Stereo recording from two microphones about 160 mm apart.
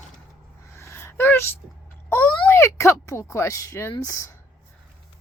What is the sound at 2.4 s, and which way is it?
Speech, 15° left (ahead or behind).